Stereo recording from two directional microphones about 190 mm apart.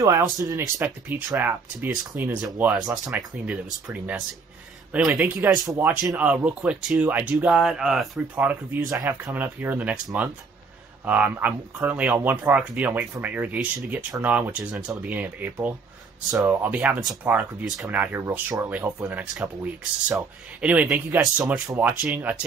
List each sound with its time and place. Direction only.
0.0 s speech: 15° right (ahead or behind)
11.1 s speech: 10° right (ahead or behind)